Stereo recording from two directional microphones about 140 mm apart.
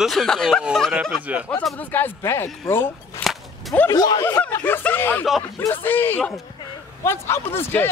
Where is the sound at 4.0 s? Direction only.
30° left (ahead or behind).